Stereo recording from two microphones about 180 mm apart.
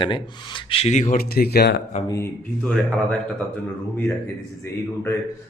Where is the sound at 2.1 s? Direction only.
15° left (ahead or behind).